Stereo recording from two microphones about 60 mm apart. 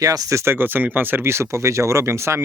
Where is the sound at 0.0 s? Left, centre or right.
Right.